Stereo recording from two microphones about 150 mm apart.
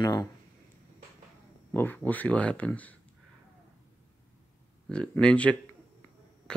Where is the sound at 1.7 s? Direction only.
10° left (ahead or behind).